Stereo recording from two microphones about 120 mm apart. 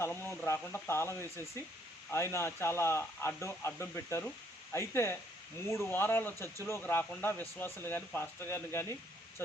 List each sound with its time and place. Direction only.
0.0 s speech: 20° left (ahead or behind)